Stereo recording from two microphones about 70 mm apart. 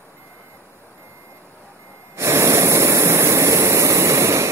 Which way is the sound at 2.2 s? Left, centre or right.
Right.